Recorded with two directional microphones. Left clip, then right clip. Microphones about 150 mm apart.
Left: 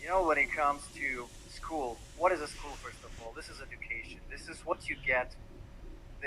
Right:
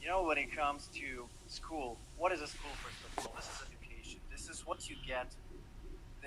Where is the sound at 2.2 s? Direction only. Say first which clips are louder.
Left 6 dB; 10° left (ahead or behind).